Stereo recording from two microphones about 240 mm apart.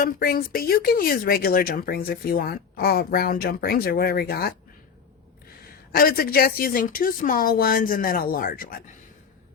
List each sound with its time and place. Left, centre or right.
0.0 s speech: left
5.9 s speech: left